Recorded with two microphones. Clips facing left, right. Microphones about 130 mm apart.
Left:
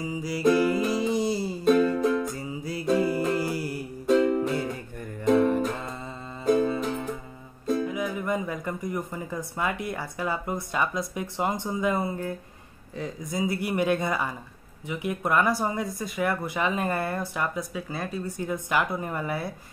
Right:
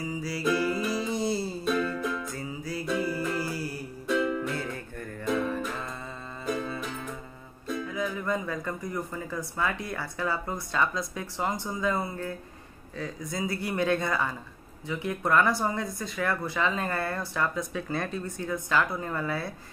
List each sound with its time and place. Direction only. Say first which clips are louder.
0.0 s music: left 5 dB; 20° left (ahead or behind)
2.0 s music: left 8 dB; 40° left (ahead or behind)
2.2 s music: left 3 dB; 20° left (ahead or behind)
2.9 s music: left 7 dB; 55° left (ahead or behind)
3.2 s music: left 4 dB; 20° left (ahead or behind)
4.1 s music: left 6 dB; 40° left (ahead or behind)
4.6 s music: left 4 dB; 15° left (ahead or behind)
5.2 s music: left 8 dB; 30° left (ahead or behind)
7.6 s music: left 7 dB; 35° left (ahead or behind)
7.9 s speech: left 2 dB; 15° left (ahead or behind)